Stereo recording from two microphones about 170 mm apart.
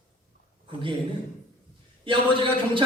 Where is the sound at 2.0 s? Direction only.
30° right (ahead or behind).